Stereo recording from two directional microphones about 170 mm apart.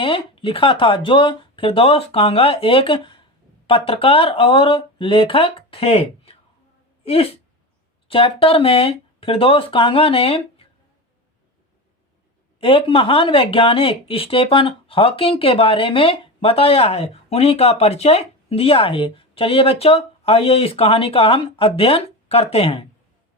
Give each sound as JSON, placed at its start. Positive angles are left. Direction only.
{"t": 0.0, "sound": "speech", "side_deg": 30}
{"t": 12.5, "sound": "speech", "side_deg": 30}